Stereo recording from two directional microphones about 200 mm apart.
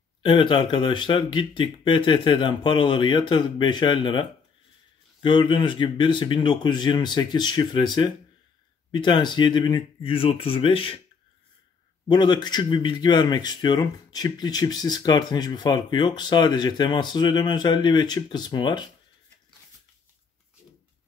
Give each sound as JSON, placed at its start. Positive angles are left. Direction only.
{"t": 0.2, "sound": "speech", "side_deg": 25}
{"t": 12.1, "sound": "speech", "side_deg": 20}